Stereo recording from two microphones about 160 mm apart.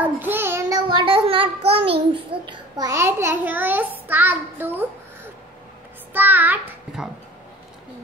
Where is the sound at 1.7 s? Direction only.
35° right (ahead or behind).